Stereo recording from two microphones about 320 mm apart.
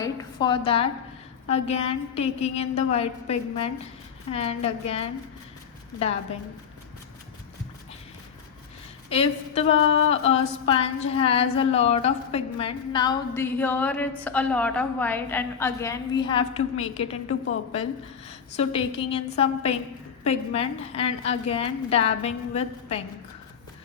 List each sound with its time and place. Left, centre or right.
0.0 s a sound: centre
1.5 s a woman's voice: centre
9.0 s a woman's voice: centre
18.3 s a woman's voice: centre